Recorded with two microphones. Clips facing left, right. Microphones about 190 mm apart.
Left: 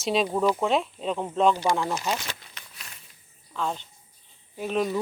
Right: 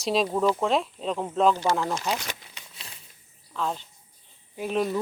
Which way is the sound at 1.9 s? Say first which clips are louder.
Even; centre (ahead or behind).